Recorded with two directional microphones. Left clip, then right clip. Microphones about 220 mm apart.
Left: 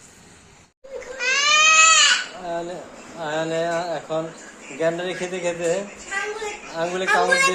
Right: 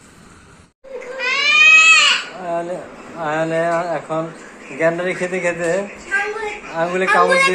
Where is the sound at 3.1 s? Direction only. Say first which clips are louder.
Right 5 dB; centre (ahead or behind).